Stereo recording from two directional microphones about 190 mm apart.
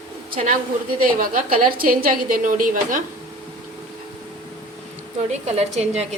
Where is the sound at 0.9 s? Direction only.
50° right (ahead or behind).